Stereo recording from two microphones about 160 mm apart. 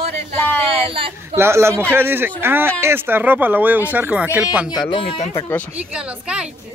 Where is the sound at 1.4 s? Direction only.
15° right (ahead or behind).